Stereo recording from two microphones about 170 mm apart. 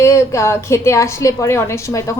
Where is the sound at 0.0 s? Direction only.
15° left (ahead or behind).